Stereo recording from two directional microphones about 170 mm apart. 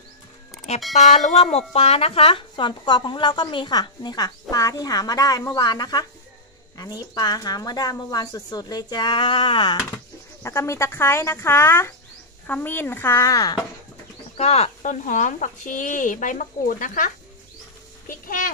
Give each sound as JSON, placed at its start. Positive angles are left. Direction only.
{"t": 0.9, "sound": "speech", "side_deg": 45}
{"t": 10.4, "sound": "speech", "side_deg": 15}
{"t": 14.3, "sound": "speech", "side_deg": 40}
{"t": 18.0, "sound": "a sound", "side_deg": 55}